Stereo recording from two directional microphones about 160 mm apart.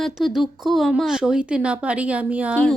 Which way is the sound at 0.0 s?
Centre (ahead or behind).